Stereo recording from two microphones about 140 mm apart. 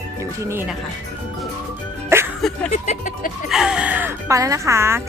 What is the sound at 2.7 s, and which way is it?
Speech, 65° left (ahead or behind).